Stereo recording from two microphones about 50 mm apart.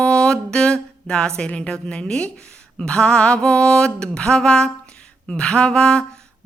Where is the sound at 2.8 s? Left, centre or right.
Centre.